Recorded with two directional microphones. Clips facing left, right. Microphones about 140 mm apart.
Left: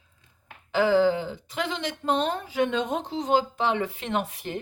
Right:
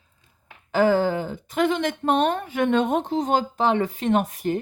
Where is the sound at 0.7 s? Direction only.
45° right (ahead or behind).